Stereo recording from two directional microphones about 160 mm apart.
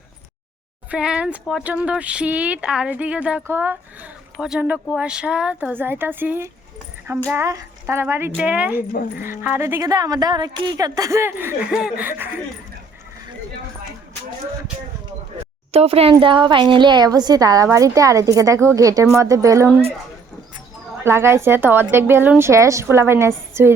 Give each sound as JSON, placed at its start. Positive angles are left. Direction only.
{"t": 0.9, "sound": "a woman's voice", "side_deg": -5}
{"t": 15.7, "sound": "a woman's voice", "side_deg": -40}
{"t": 21.0, "sound": "speech", "side_deg": -15}